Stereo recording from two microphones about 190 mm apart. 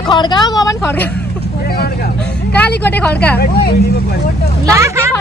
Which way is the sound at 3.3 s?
60° left (ahead or behind).